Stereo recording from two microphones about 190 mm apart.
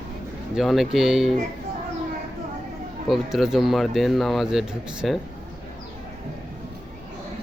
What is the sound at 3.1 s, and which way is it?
Speech, centre (ahead or behind).